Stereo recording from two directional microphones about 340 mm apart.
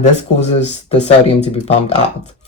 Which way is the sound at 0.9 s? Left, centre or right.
Centre.